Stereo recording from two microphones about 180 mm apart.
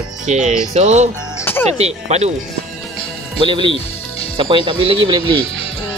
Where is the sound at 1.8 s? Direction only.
35° right (ahead or behind).